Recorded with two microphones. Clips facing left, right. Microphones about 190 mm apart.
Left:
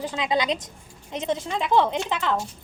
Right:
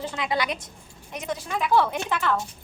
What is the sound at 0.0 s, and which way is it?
A woman's voice, 20° left (ahead or behind).